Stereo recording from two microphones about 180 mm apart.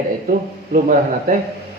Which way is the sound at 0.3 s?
45° right (ahead or behind).